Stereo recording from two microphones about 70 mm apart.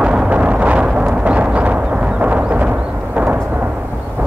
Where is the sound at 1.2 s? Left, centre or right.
Centre.